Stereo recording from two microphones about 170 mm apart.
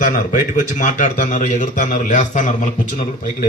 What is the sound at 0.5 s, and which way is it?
A man's voice, 50° left (ahead or behind).